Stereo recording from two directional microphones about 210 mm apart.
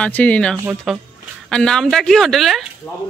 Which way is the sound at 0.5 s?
10° right (ahead or behind).